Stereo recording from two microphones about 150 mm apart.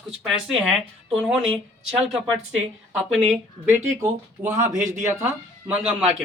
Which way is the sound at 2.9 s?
5° right (ahead or behind).